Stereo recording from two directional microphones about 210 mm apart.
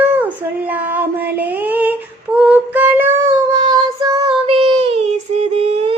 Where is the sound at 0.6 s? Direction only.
10° right (ahead or behind).